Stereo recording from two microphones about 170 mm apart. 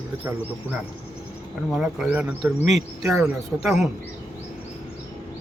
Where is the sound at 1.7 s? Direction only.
5° right (ahead or behind).